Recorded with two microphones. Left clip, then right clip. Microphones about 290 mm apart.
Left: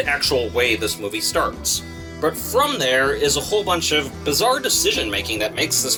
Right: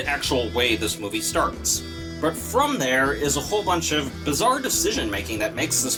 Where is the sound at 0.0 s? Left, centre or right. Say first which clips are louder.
Left 4 dB; centre.